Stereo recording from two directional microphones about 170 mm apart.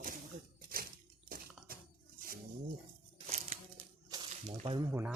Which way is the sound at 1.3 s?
60° right (ahead or behind).